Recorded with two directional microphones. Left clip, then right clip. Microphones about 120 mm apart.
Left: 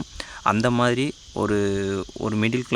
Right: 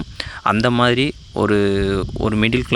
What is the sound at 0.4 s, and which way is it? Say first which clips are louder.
Speech: right 4 dB; 25° right (ahead or behind).